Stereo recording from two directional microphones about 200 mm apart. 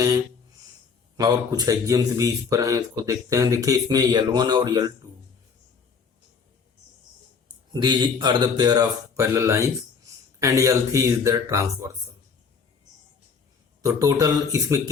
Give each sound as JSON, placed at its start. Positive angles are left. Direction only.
{"t": 1.1, "sound": "speech", "side_deg": -20}
{"t": 7.7, "sound": "speech", "side_deg": -20}
{"t": 13.8, "sound": "speech", "side_deg": -15}